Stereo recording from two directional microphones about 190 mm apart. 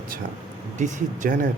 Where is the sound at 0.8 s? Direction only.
45° right (ahead or behind).